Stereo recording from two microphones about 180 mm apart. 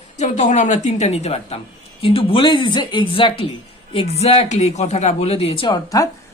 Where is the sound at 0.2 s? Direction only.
40° left (ahead or behind).